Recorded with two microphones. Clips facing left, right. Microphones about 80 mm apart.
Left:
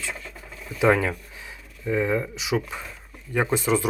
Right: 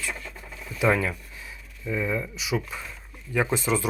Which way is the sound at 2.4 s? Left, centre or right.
Left.